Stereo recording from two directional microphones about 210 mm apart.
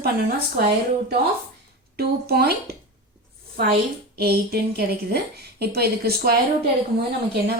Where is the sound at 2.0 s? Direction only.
50° right (ahead or behind).